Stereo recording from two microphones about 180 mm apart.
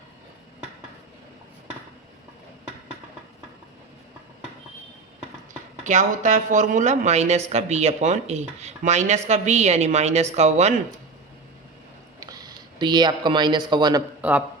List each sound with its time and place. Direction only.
5.8 s speech: 40° right (ahead or behind)
12.2 s speech: 20° right (ahead or behind)
14.2 s a man's voice: 10° right (ahead or behind)